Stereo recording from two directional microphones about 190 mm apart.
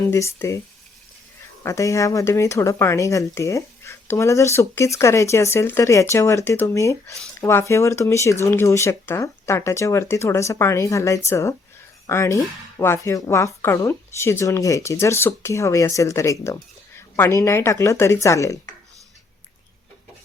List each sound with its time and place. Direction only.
0.1 s speech: 15° left (ahead or behind)
1.6 s speech: 15° left (ahead or behind)